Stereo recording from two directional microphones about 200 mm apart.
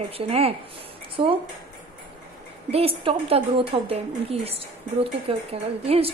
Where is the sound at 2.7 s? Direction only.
30° right (ahead or behind).